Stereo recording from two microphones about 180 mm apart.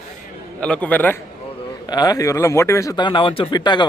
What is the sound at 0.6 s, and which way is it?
Speech, 5° left (ahead or behind).